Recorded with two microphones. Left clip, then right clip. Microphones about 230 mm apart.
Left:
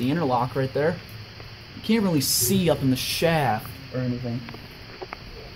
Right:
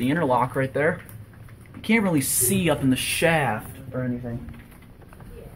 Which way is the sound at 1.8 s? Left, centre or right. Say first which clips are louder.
Right 2 dB; centre.